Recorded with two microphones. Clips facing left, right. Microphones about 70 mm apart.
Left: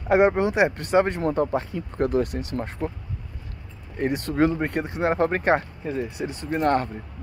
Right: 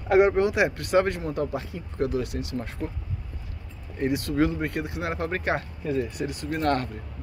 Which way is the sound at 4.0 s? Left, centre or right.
Left.